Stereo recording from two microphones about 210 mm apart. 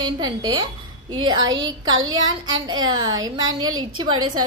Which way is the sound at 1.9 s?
70° right (ahead or behind).